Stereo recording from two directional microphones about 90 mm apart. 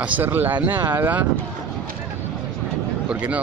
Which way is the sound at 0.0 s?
20° right (ahead or behind).